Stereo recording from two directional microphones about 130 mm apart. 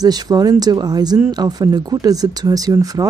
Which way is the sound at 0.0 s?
30° right (ahead or behind).